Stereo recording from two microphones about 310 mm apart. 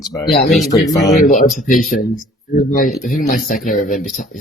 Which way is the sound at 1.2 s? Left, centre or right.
Left.